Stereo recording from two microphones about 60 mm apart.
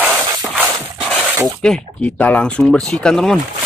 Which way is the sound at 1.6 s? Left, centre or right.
Centre.